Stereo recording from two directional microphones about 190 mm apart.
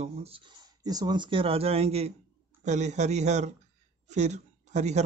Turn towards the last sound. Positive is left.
turn(degrees=-35)  # may be behind; listen again after turning